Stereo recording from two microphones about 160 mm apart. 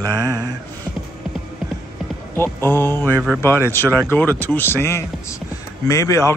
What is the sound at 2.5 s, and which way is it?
A man's voice, 15° left (ahead or behind).